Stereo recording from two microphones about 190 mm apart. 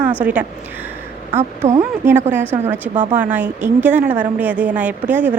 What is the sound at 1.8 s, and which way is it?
Speech, 15° right (ahead or behind).